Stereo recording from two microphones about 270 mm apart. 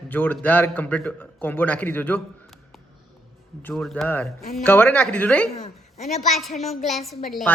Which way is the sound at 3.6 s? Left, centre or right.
Centre.